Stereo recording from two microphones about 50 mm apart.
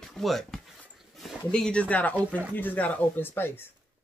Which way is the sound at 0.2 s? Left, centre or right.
Centre.